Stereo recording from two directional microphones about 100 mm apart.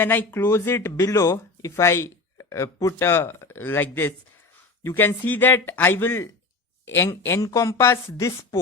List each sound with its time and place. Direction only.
0.0 s speech: 20° left (ahead or behind)